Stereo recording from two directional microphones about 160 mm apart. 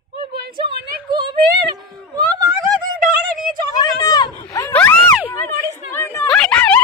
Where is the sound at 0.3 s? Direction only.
30° right (ahead or behind).